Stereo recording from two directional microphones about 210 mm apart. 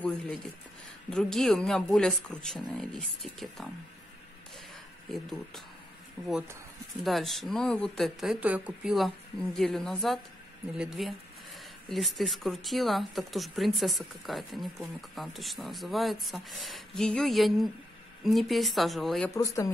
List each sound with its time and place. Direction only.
1.1 s speech: centre (ahead or behind)
5.1 s speech: centre (ahead or behind)
19.3 s speech: 15° left (ahead or behind)